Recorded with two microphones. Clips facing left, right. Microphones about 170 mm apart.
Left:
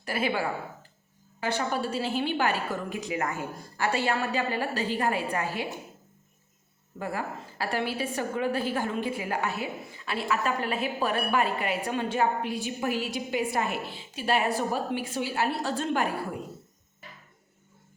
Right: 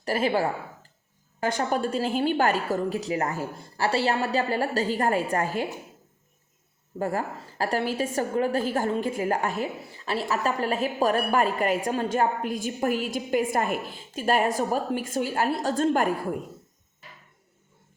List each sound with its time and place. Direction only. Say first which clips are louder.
0.0 s a woman's voice: right 4 dB; 40° right (ahead or behind)
7.0 s a woman's voice: right 5 dB; 40° right (ahead or behind)